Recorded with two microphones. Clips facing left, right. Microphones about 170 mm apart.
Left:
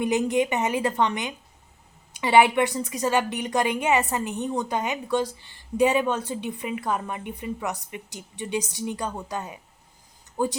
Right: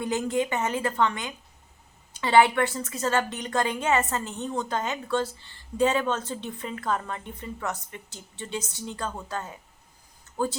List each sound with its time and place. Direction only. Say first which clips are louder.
0.0 s a woman's voice: left 4 dB; 20° left (ahead or behind)